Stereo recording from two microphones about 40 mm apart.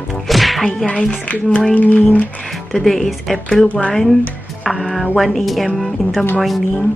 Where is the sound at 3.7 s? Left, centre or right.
Left.